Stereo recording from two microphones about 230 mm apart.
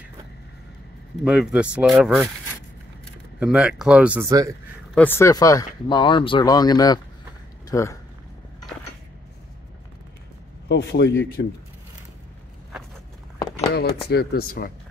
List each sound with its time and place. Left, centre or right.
1.2 s speech: centre
3.3 s speech: centre
4.9 s speech: centre
10.7 s speech: left
14.0 s speech: left